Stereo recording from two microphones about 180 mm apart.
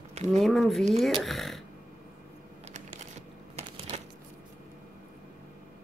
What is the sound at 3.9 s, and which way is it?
Shuffling cards, 40° right (ahead or behind).